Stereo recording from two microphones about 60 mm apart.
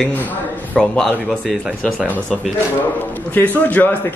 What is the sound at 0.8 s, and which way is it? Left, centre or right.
Speech, centre.